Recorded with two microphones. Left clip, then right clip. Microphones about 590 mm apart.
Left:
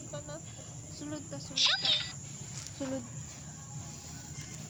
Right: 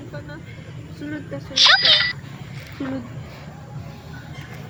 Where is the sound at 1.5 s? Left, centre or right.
Centre.